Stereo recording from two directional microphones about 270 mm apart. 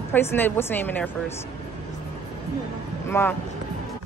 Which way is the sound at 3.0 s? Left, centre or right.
Centre.